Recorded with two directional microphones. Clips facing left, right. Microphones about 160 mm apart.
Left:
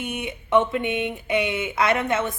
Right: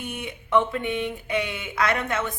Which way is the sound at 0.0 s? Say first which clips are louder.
Left 4 dB; 20° left (ahead or behind).